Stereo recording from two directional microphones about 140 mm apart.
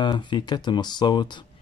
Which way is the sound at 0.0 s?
30° left (ahead or behind).